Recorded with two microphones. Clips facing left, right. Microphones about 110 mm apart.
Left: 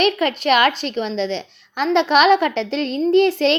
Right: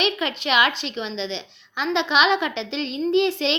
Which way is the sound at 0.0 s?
45° left (ahead or behind).